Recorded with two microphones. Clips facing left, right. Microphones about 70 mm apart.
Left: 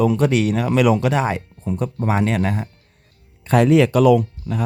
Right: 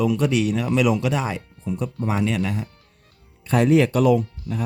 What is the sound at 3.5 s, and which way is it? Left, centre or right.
Speech, left.